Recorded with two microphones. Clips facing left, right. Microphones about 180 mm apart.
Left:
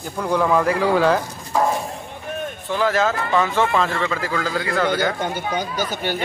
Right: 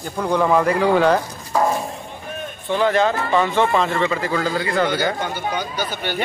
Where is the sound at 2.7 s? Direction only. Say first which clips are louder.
Right 2 dB; centre (ahead or behind).